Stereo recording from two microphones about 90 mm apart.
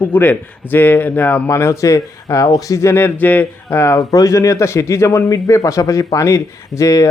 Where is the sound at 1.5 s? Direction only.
30° left (ahead or behind).